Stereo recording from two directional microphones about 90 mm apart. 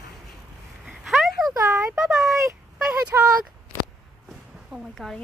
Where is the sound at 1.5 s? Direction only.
35° right (ahead or behind).